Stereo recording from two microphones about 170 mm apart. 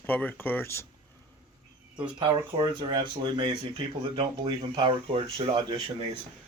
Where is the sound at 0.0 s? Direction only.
10° left (ahead or behind).